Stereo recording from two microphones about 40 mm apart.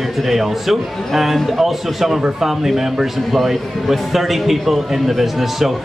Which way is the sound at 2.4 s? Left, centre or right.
Centre.